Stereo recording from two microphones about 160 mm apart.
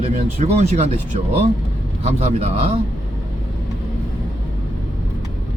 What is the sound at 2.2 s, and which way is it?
Speech, 40° right (ahead or behind).